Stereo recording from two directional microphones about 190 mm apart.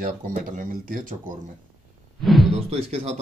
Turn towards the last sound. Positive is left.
turn(degrees=-35)  # may be behind; listen again after turning